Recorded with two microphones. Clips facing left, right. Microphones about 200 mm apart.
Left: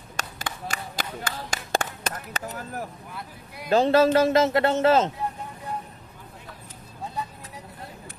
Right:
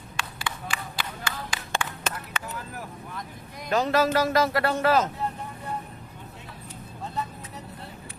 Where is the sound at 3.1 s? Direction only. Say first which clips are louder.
Right 1 dB; 10° left (ahead or behind).